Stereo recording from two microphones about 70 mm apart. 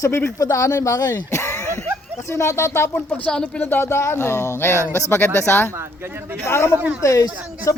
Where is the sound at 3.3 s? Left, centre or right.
Centre.